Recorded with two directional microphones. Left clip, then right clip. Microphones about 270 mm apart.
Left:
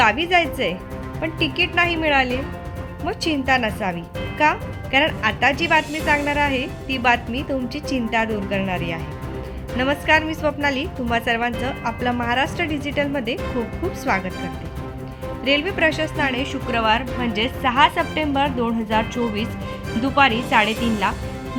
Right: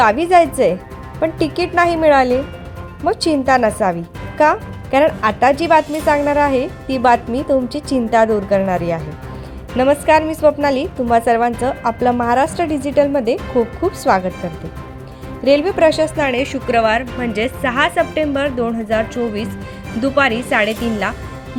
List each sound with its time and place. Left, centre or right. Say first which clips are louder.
0.0 s speech: right 6 dB; centre
15.4 s speech: right 7 dB; centre